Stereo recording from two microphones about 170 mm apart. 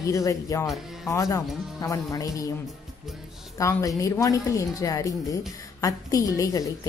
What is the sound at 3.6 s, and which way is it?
A woman's voice, 20° left (ahead or behind).